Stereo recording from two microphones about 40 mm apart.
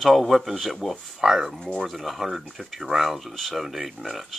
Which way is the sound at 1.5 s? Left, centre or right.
Centre.